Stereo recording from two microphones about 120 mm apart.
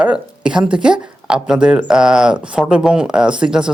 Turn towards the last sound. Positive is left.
turn(degrees=-5)  # may be behind; listen again after turning